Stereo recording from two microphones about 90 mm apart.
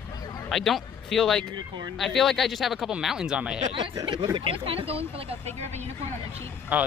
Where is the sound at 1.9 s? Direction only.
Centre (ahead or behind).